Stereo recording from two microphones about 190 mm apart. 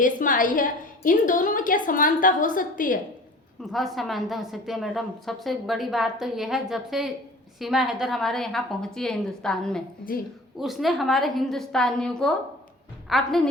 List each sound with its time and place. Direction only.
0.0 s a woman's voice: 45° left (ahead or behind)
3.6 s a woman's voice: centre (ahead or behind)